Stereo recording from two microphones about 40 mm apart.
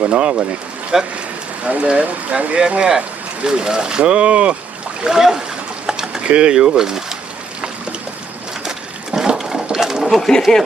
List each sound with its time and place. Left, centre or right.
0.0 s speech: right
0.9 s speech: centre
1.6 s speech: right
5.0 s speech: centre
5.8 s a sound: centre
6.2 s speech: right
9.1 s a sound: centre
9.7 s pigeon: centre
10.2 s speech: centre